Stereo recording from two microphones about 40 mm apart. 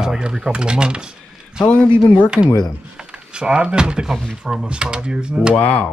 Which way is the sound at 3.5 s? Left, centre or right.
Right.